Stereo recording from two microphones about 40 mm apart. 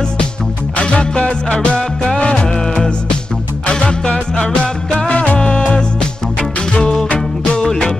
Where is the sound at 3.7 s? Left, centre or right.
Left.